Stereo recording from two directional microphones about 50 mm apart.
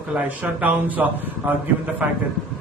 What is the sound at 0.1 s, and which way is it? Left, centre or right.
A man's voice, right.